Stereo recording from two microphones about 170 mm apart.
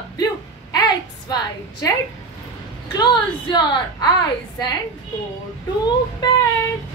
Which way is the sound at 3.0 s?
25° left (ahead or behind).